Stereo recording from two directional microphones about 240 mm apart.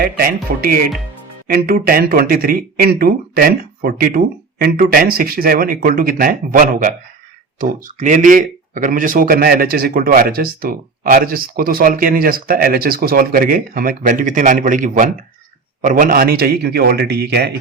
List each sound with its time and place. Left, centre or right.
0.0 s speech: right